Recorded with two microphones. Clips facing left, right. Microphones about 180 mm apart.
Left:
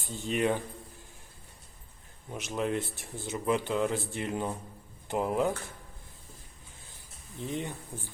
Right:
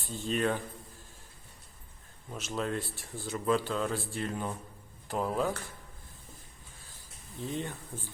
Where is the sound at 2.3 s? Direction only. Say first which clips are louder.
Left 3 dB; 15° left (ahead or behind).